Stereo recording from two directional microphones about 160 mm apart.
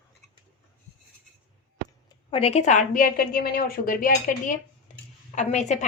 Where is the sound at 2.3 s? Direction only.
40° left (ahead or behind); by 4.5 s 60° left (ahead or behind).